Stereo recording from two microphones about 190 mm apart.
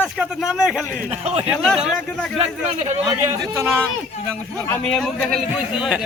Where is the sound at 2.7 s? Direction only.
35° right (ahead or behind).